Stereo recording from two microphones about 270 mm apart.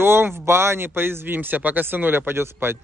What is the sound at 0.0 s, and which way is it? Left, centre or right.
Speech, centre.